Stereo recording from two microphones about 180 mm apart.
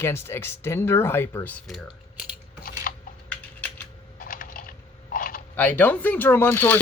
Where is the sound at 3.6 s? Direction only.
10° left (ahead or behind).